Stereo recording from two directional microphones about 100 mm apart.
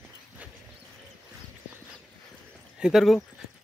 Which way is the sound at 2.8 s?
5° right (ahead or behind).